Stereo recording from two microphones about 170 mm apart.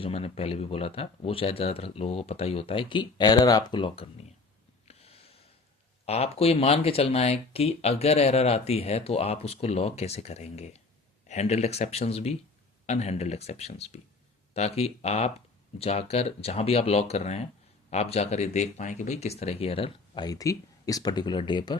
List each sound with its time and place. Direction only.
0.0 s speech: 35° left (ahead or behind)
4.9 s a sound: 35° left (ahead or behind)
6.1 s speech: 35° left (ahead or behind)